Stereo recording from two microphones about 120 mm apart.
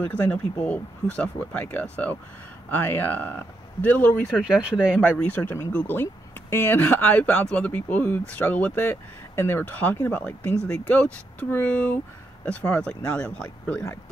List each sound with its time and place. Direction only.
0.0 s speech: 10° left (ahead or behind)
4.4 s speech: 5° right (ahead or behind)
5.2 s speech: 15° left (ahead or behind)